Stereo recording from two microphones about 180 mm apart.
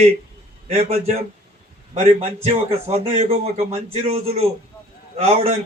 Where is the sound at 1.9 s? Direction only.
35° right (ahead or behind).